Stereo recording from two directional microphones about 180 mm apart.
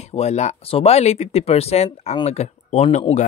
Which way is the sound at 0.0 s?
35° left (ahead or behind).